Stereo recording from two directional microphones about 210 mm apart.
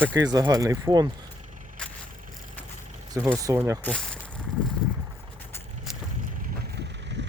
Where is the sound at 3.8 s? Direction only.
5° left (ahead or behind).